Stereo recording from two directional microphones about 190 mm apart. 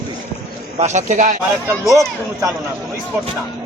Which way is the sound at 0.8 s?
40° right (ahead or behind).